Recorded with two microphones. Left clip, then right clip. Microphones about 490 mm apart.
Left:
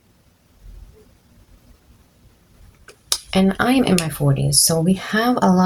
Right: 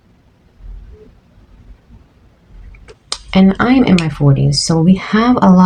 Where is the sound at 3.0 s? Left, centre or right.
Left.